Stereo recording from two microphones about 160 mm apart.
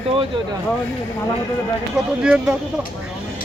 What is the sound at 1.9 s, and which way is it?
Speech, 5° right (ahead or behind).